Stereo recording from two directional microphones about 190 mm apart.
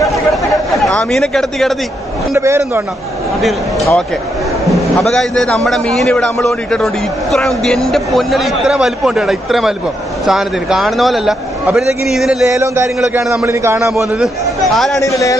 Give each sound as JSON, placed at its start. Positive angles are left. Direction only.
{"t": 0.7, "sound": "speech", "side_deg": 0}
{"t": 2.3, "sound": "a man's voice", "side_deg": -15}
{"t": 3.3, "sound": "speech", "side_deg": 0}
{"t": 12.4, "sound": "a man's voice", "side_deg": -15}
{"t": 14.2, "sound": "speech", "side_deg": 0}
{"t": 15.0, "sound": "speech", "side_deg": 15}